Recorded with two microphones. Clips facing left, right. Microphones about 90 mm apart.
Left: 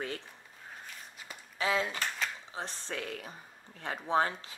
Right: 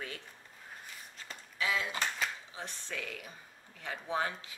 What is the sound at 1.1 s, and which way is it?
Walk, 10° left (ahead or behind).